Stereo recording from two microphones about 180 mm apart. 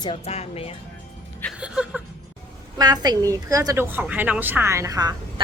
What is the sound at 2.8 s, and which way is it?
A woman's voice, 20° right (ahead or behind).